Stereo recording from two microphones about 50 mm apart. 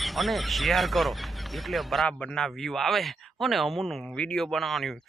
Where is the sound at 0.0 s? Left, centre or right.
Centre.